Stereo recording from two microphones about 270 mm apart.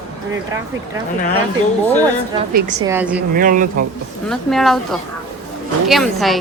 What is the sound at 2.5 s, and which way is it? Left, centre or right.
Speech, right.